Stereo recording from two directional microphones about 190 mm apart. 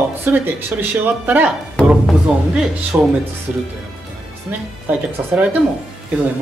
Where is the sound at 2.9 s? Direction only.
15° right (ahead or behind).